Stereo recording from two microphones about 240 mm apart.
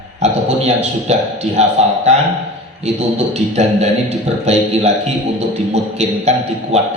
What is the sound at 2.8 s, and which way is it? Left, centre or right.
A man's voice, right.